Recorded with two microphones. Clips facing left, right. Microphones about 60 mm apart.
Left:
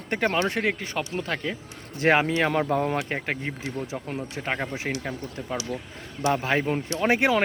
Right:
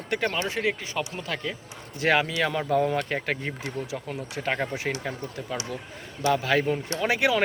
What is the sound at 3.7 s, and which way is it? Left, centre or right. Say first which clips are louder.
Speech: left 1 dB; left.